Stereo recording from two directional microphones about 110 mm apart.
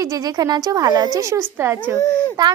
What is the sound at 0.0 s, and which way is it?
Speech, 35° right (ahead or behind).